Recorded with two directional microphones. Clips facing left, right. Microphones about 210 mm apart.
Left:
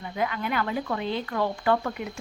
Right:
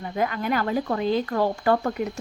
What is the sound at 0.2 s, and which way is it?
Speech, 45° right (ahead or behind).